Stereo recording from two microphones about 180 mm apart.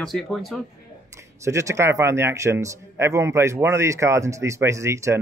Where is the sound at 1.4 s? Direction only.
15° right (ahead or behind).